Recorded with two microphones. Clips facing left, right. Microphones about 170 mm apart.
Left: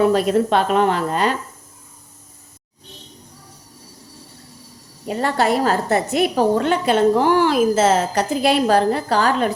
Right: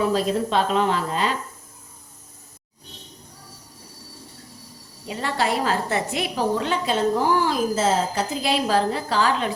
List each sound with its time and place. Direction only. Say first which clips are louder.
0.0 s a woman's voice: left 6 dB; 60° left (ahead or behind)
5.0 s a woman's voice: left 6 dB; 50° left (ahead or behind)